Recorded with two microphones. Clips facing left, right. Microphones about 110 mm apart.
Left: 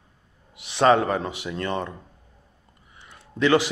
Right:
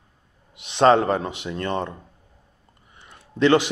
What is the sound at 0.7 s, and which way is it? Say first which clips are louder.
Speech: right 2 dB; 20° right (ahead or behind).